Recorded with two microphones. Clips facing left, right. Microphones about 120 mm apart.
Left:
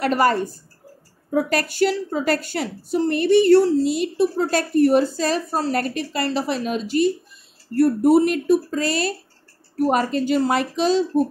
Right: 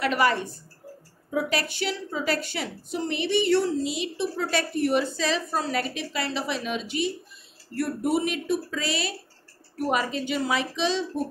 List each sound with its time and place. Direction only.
0.0 s a woman's voice: 40° left (ahead or behind)